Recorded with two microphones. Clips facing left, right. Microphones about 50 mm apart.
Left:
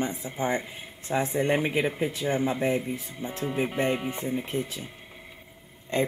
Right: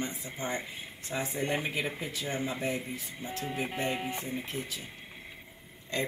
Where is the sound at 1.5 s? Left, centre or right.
Centre.